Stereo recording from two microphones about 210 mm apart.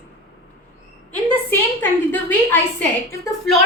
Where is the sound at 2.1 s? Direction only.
10° left (ahead or behind).